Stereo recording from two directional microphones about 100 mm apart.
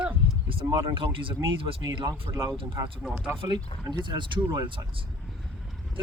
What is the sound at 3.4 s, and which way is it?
Speech, 45° right (ahead or behind).